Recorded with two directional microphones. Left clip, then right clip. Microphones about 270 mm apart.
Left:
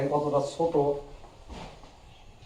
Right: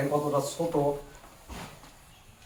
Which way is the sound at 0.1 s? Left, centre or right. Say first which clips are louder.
Left 1 dB; right.